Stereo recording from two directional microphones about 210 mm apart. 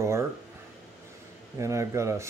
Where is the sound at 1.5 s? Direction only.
15° right (ahead or behind).